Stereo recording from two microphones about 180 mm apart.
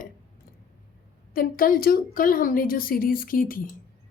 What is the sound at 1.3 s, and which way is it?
A woman's voice, 50° left (ahead or behind).